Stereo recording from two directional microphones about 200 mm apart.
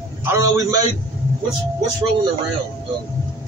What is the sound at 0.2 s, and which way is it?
Speech, 15° right (ahead or behind).